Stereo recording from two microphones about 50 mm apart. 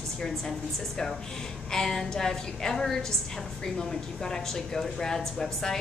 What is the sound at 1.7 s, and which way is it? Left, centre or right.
A woman's voice, centre.